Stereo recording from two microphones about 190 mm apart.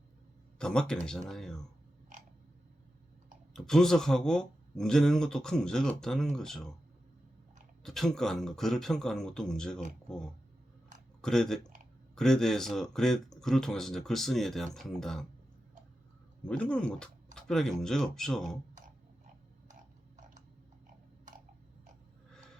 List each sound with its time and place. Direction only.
0.6 s speech: 5° left (ahead or behind)
3.5 s speech: centre (ahead or behind)
7.9 s speech: centre (ahead or behind)
11.2 s speech: 5° left (ahead or behind)
16.4 s speech: 5° left (ahead or behind)